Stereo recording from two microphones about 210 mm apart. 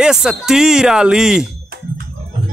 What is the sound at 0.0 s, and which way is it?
Speech, 5° right (ahead or behind).